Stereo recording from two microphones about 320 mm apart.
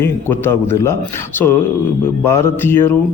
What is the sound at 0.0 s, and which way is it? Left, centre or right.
Speech, centre.